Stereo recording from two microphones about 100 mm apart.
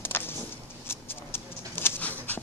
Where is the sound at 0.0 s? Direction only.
20° left (ahead or behind).